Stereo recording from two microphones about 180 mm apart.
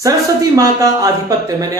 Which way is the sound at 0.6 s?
20° right (ahead or behind).